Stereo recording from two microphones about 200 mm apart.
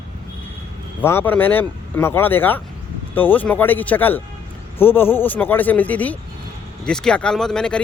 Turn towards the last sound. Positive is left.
turn(degrees=5)  # may be behind; listen again after turning